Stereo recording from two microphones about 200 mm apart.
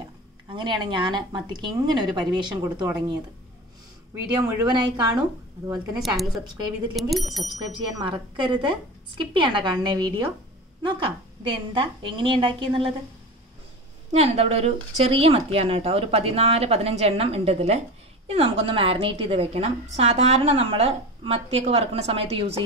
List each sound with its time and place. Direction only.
0.6 s speech: 25° right (ahead or behind)
4.4 s speech: 20° right (ahead or behind)
5.9 s speech: centre (ahead or behind)
8.0 s speech: 25° right (ahead or behind)
11.4 s speech: 25° right (ahead or behind)
14.1 s speech: 30° right (ahead or behind)